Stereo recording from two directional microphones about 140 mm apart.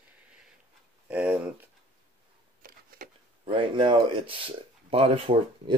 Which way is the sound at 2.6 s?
90° right.